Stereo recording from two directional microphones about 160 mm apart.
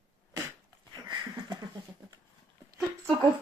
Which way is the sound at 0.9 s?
30° right (ahead or behind).